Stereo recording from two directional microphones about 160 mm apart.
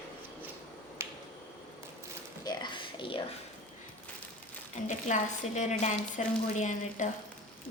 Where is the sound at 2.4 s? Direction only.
25° left (ahead or behind).